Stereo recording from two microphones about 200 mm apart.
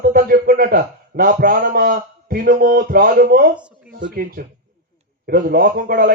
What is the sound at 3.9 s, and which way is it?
A man's voice, 45° right (ahead or behind).